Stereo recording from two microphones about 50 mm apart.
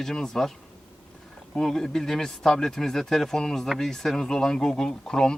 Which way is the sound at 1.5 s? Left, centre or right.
Centre.